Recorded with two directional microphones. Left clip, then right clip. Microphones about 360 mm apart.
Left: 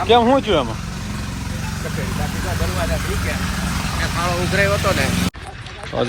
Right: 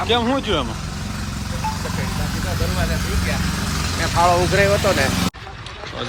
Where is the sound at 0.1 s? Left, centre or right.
Centre.